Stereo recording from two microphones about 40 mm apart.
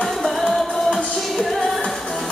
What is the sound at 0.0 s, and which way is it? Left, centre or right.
Music, centre.